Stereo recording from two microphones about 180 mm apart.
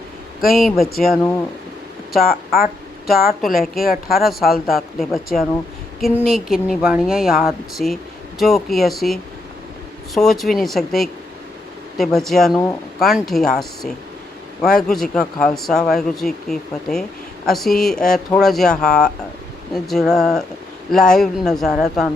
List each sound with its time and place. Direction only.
0.5 s speech: centre (ahead or behind)
2.1 s a woman's voice: 60° left (ahead or behind)
3.8 s a woman's voice: 55° left (ahead or behind)
4.2 s speech: centre (ahead or behind)
10.2 s speech: centre (ahead or behind)